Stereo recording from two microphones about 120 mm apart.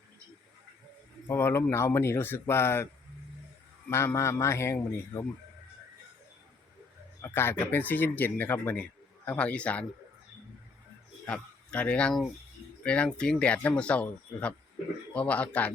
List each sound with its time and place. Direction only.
1.3 s speech: 20° left (ahead or behind)
3.8 s speech: 20° left (ahead or behind)
7.2 s speech: 20° left (ahead or behind)
11.3 s speech: 10° left (ahead or behind)